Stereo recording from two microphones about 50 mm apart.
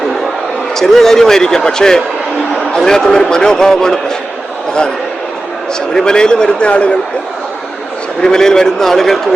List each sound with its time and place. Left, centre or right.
0.8 s a man's voice: centre
5.9 s a man's voice: centre
8.2 s a man's voice: centre